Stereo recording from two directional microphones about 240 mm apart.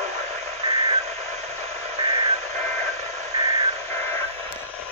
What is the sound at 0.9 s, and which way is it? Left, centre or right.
Radio, right.